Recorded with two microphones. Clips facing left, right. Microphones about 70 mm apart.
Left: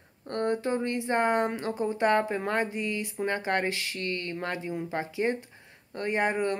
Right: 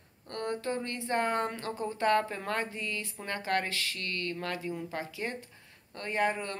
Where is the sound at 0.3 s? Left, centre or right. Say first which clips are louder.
Left 6 dB; left.